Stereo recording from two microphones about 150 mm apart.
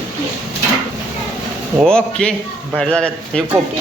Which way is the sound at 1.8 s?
5° left (ahead or behind).